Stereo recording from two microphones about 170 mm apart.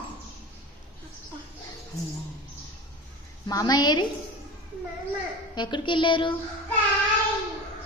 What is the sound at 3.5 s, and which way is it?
Speech, 20° left (ahead or behind).